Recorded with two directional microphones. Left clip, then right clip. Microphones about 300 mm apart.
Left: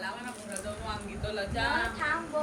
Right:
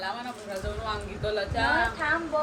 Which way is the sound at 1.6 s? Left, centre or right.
Right.